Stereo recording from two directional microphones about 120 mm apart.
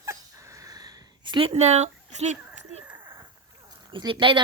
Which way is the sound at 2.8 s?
15° right (ahead or behind).